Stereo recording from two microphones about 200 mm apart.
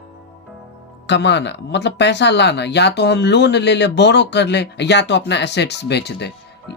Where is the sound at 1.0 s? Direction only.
60° left (ahead or behind).